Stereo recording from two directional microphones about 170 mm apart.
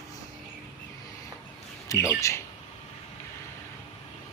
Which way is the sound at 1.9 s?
20° left (ahead or behind).